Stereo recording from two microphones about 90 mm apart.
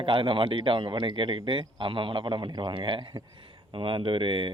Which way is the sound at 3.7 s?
80° right.